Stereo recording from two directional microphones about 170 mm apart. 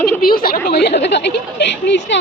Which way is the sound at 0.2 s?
60° left (ahead or behind).